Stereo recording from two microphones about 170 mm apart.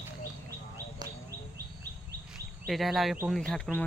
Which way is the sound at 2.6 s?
Centre (ahead or behind).